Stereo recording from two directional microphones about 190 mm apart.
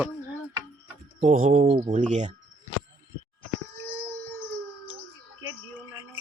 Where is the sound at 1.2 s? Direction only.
40° right (ahead or behind).